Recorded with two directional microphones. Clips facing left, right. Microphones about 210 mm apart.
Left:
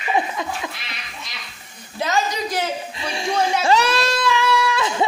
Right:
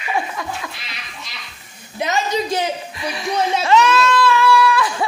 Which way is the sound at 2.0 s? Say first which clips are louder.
Right 2 dB; 20° right (ahead or behind).